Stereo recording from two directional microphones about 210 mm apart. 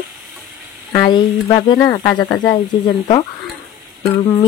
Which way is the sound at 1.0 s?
20° left (ahead or behind).